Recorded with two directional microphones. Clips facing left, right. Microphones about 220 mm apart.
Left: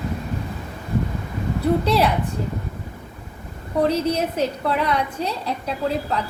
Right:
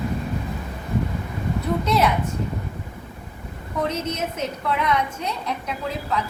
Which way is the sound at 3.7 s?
35° left (ahead or behind).